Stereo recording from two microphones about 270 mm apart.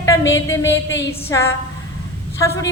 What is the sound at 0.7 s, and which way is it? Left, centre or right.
Speech, left.